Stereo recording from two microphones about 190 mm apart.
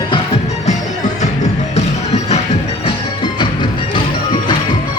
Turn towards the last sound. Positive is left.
turn(degrees=25)  # may be behind; listen again after turning